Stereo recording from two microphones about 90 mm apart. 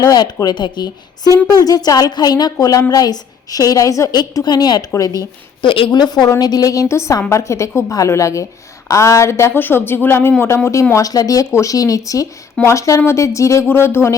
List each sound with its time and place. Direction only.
0.1 s speech: 45° left (ahead or behind)
4.1 s speech: 50° left (ahead or behind)
5.6 s a woman's voice: 75° left (ahead or behind)
6.0 s speech: 55° left (ahead or behind); by 10.6 s 30° left (ahead or behind)
10.9 s speech: 40° left (ahead or behind)